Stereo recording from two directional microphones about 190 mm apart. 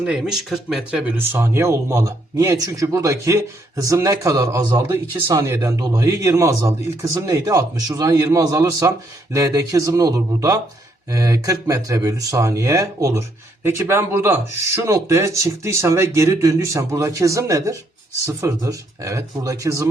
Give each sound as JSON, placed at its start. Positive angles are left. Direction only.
{"t": 0.0, "sound": "speech", "side_deg": -5}